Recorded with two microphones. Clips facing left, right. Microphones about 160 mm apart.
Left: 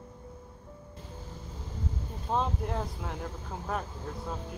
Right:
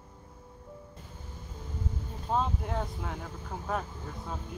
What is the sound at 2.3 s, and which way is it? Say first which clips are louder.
Speech: even; centre (ahead or behind).